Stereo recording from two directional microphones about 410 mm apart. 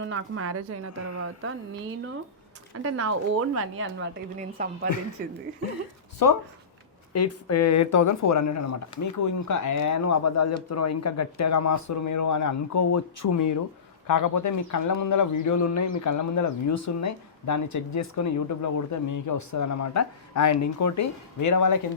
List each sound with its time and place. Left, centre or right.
0.0 s a woman's voice: right
2.7 s a woman's voice: right
4.4 s a woman's voice: centre
6.2 s speech: left
7.1 s speech: left